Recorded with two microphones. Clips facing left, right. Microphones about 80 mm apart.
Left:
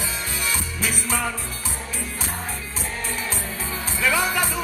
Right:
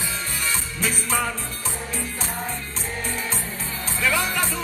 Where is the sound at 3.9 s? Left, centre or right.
Centre.